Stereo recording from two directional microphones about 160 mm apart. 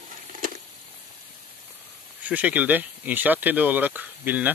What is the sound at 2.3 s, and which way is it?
Speech, 10° right (ahead or behind).